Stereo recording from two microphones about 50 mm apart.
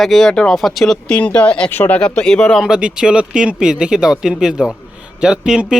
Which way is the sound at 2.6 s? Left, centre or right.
Centre.